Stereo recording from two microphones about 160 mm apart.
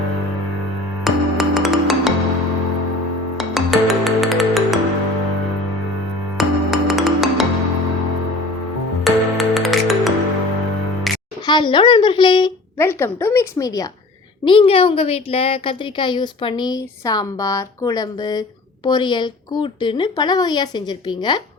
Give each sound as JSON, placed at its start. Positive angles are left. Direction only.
{"t": 1.0, "sound": "music", "side_deg": 0}
{"t": 3.3, "sound": "music", "side_deg": 0}
{"t": 6.3, "sound": "music", "side_deg": 0}
{"t": 9.0, "sound": "music", "side_deg": 0}
{"t": 11.4, "sound": "a woman's voice", "side_deg": 30}
{"t": 12.8, "sound": "a woman's voice", "side_deg": 15}
{"t": 14.4, "sound": "a woman's voice", "side_deg": 35}